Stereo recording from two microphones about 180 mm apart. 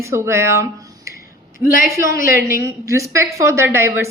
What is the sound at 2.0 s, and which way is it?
A woman's voice, 15° right (ahead or behind).